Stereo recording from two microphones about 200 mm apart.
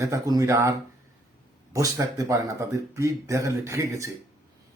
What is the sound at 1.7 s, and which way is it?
Speech, 15° right (ahead or behind).